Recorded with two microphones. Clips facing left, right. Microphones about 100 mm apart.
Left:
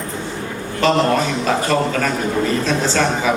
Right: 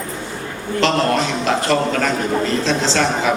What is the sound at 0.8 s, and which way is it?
A man's voice, 15° left (ahead or behind).